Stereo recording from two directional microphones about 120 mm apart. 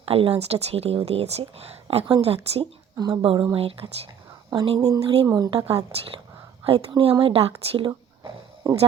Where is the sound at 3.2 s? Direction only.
50° right (ahead or behind).